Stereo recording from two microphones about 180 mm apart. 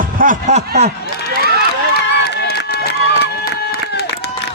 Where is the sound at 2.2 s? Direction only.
65° left (ahead or behind).